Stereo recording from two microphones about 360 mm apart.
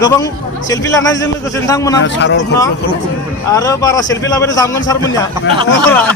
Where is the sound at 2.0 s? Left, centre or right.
Left.